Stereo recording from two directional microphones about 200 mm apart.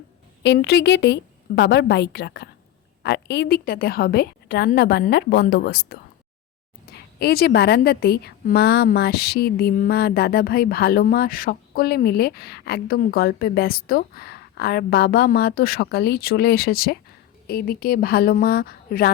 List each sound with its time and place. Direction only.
0.4 s a woman's voice: 60° left (ahead or behind)